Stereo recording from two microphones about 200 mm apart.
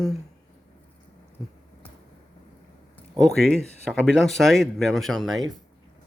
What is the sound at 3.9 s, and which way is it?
A man's voice, centre (ahead or behind).